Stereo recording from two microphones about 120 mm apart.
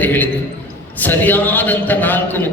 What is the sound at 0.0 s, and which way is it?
A man's voice, 15° left (ahead or behind).